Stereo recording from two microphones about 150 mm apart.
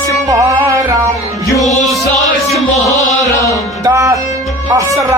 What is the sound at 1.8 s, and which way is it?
Music, centre (ahead or behind).